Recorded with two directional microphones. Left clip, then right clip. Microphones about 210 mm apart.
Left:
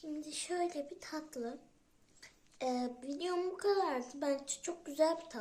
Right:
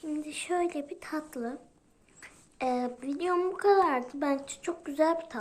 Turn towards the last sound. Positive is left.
turn(degrees=-15)  # may be behind; listen again after turning